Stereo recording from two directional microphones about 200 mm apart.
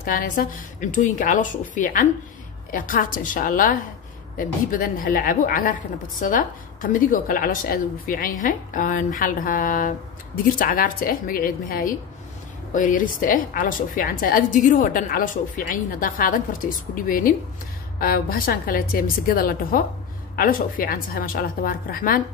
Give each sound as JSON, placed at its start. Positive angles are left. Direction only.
{"t": 0.0, "sound": "a woman's voice", "side_deg": 45}